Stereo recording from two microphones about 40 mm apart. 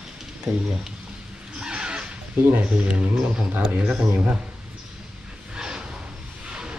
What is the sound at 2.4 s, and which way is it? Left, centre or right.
Speech, right.